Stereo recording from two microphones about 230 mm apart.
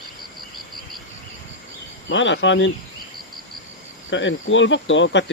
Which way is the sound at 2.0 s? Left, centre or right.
Left.